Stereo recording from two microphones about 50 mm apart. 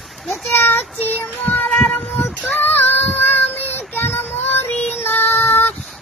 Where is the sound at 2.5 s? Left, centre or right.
Left.